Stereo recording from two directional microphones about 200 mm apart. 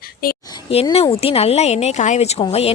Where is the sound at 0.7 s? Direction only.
30° left (ahead or behind).